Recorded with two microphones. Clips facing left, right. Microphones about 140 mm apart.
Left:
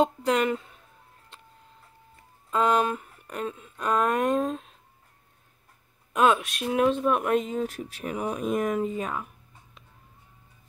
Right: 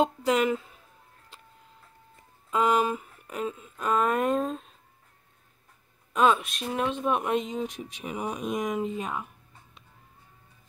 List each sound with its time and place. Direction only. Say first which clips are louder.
0.0 s speech: left 1 dB; 5° right (ahead or behind)
2.5 s speech: left 1 dB; 10° right (ahead or behind)
6.1 s speech: left 1 dB; centre (ahead or behind)
8.0 s speech: left 3 dB; 5° right (ahead or behind)